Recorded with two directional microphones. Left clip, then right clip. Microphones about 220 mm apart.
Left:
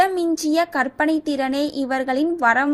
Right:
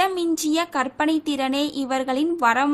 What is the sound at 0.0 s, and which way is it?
A woman's voice, 5° left (ahead or behind).